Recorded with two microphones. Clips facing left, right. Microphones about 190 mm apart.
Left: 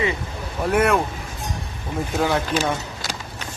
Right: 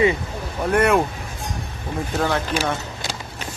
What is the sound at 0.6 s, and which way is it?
Speech, centre (ahead or behind).